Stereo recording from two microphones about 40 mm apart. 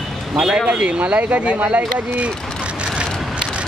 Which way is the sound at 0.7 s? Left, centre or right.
Right.